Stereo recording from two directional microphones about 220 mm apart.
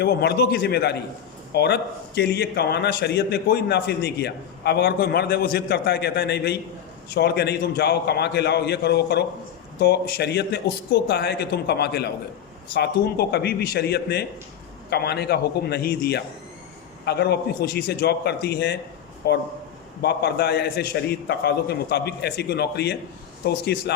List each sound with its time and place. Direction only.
0.0 s a man's voice: 45° left (ahead or behind)